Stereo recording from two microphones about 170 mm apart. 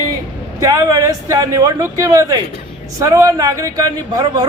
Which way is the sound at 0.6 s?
20° right (ahead or behind).